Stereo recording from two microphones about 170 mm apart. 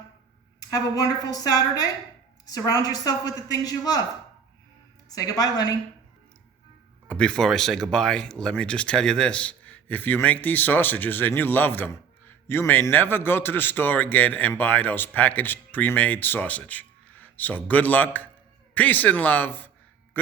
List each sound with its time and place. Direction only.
0.7 s a man's voice: 20° left (ahead or behind)
5.0 s a man's voice: 20° left (ahead or behind)
7.1 s speech: 5° left (ahead or behind)